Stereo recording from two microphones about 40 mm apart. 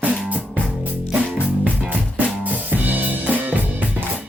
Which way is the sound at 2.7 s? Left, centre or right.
Right.